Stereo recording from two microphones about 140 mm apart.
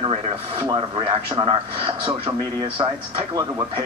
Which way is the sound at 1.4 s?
40° right (ahead or behind).